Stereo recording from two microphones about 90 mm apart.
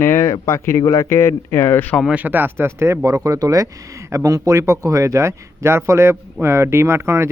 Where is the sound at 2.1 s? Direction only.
15° right (ahead or behind).